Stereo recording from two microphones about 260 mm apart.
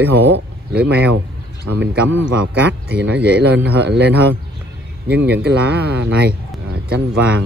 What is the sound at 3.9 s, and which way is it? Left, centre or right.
Speech, right.